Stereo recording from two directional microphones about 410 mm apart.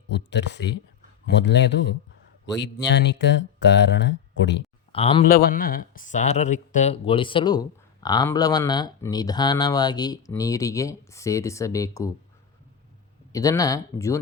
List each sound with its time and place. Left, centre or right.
0.1 s speech: left
4.9 s speech: centre
13.3 s speech: centre